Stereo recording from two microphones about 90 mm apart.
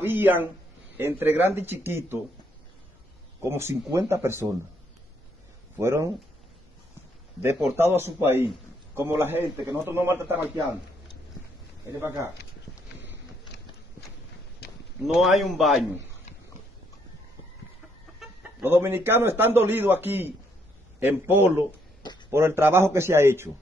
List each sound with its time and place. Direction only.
0.0 s a man's voice: 20° right (ahead or behind)
3.4 s a man's voice: 30° right (ahead or behind)
5.8 s speech: 30° right (ahead or behind)
7.4 s a man's voice: 30° right (ahead or behind)
11.9 s speech: 30° right (ahead or behind)
15.1 s a man's voice: centre (ahead or behind)
18.6 s a man's voice: 25° right (ahead or behind)